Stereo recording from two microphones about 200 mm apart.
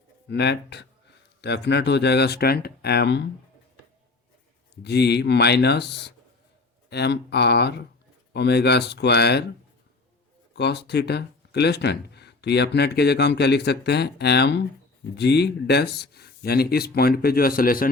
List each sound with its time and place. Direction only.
0.3 s speech: 55° left (ahead or behind)
4.7 s speech: 55° left (ahead or behind)
10.5 s speech: 55° left (ahead or behind)